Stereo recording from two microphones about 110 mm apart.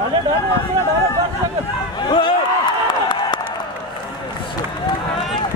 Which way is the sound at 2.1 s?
50° left (ahead or behind).